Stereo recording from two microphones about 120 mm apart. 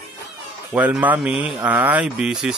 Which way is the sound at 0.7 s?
15° right (ahead or behind).